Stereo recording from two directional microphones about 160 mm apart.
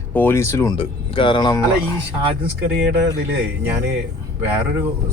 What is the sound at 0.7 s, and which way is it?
Speech, 30° left (ahead or behind).